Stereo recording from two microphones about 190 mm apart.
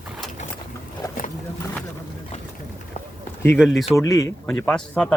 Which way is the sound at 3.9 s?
15° left (ahead or behind).